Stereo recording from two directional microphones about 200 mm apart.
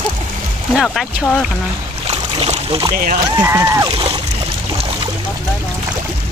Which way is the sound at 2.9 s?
45° right (ahead or behind).